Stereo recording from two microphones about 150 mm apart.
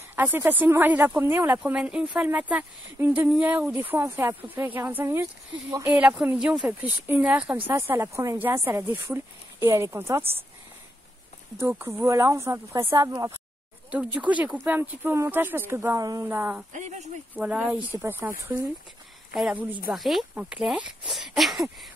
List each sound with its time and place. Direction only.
0.1 s speech: 15° right (ahead or behind)
11.6 s speech: 15° right (ahead or behind)
13.8 s speech: 10° right (ahead or behind)
16.0 s speech: 25° right (ahead or behind)
16.3 s speech: 10° right (ahead or behind)
16.7 s speech: 50° right (ahead or behind)
17.4 s speech: 10° right (ahead or behind)